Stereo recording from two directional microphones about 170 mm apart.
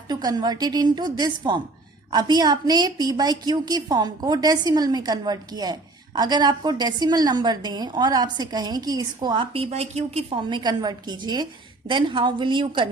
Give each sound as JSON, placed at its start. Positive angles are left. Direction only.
{"t": 0.1, "sound": "a woman's voice", "side_deg": -25}